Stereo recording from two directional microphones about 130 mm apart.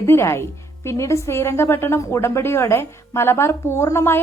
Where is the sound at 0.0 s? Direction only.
20° left (ahead or behind).